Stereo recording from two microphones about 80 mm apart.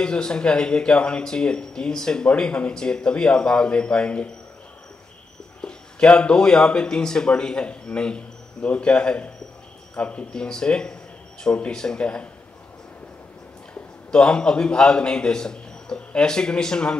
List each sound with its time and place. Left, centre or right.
0.0 s speech: centre
5.6 s speech: centre
14.1 s speech: centre